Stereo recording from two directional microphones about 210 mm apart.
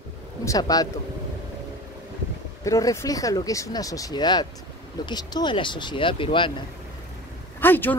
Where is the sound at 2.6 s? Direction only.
15° left (ahead or behind).